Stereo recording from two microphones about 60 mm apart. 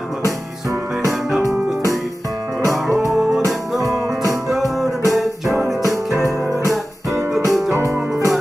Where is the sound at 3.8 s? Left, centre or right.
Right.